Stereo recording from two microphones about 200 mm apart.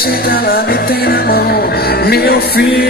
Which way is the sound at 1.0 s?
50° left (ahead or behind).